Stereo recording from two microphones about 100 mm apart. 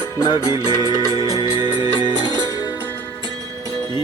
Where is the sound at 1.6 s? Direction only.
50° left (ahead or behind).